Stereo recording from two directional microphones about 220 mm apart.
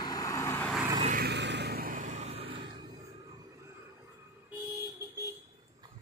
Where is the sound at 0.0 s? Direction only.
15° left (ahead or behind).